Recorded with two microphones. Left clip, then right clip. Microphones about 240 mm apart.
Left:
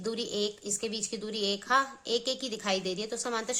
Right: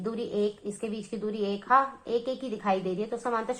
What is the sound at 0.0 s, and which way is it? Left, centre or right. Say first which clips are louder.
A woman's voice: right 2 dB; left.